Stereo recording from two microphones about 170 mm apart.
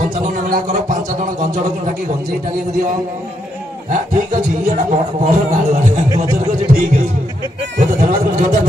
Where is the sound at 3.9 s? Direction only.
50° right (ahead or behind).